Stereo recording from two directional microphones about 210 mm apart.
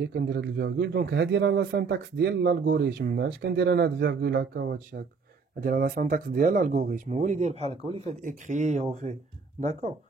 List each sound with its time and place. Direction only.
0.0 s a man's voice: 50° right (ahead or behind); by 9.9 s 35° right (ahead or behind)